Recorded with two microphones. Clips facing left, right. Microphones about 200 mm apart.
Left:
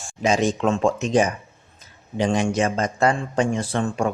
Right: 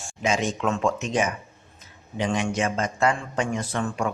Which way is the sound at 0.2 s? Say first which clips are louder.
Left 5 dB; 35° left (ahead or behind).